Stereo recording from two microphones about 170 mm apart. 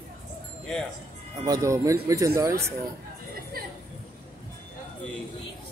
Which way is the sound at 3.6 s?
60° right (ahead or behind).